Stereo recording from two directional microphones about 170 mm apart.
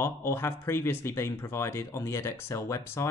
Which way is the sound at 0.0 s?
15° left (ahead or behind).